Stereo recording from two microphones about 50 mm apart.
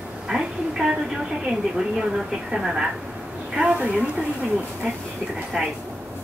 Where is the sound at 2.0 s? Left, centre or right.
Centre.